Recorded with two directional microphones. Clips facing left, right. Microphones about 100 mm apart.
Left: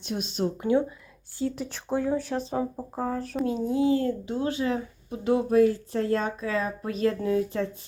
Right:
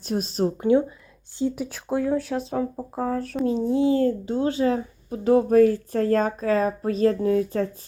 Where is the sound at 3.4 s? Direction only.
30° right (ahead or behind).